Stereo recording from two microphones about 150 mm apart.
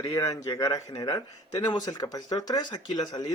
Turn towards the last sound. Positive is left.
turn(degrees=30)  # may be behind; listen again after turning